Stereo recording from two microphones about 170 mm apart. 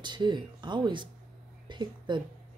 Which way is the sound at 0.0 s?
25° right (ahead or behind).